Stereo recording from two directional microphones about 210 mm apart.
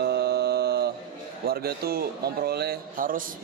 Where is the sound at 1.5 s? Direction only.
50° right (ahead or behind).